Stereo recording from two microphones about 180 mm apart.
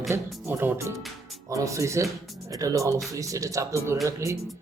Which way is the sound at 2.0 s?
Centre (ahead or behind).